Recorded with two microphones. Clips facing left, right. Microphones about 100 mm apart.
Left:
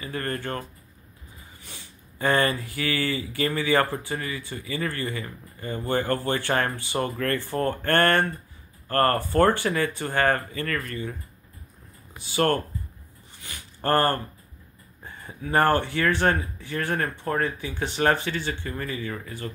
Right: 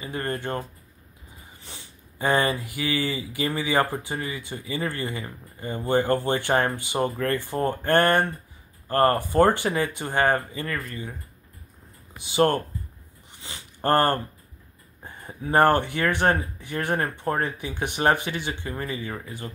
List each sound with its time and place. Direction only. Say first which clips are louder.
0.0 s speech: right 1 dB; 20° right (ahead or behind)
1.7 s speech: right 2 dB; 20° right (ahead or behind)
12.2 s speech: right 2 dB; 20° right (ahead or behind)
13.4 s a sound: right 3 dB; 20° right (ahead or behind)
15.4 s speech: right 2 dB; 20° right (ahead or behind)